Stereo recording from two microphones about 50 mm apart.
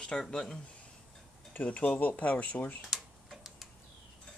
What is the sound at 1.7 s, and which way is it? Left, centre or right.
Speech, left.